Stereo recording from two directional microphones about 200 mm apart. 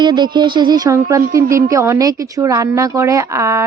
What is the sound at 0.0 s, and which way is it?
Speech, 20° right (ahead or behind).